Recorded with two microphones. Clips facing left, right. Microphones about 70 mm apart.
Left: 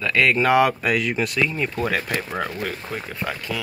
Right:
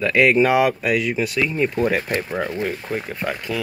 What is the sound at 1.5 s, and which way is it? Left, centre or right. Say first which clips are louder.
Speech: right 4 dB; centre.